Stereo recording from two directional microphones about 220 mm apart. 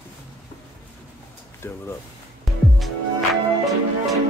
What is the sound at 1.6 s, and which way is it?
Speech, 10° left (ahead or behind).